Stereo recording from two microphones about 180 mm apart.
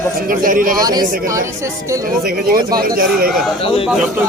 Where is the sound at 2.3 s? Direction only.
60° right (ahead or behind).